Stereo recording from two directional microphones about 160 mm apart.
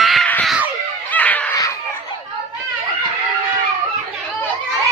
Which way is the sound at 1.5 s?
20° left (ahead or behind).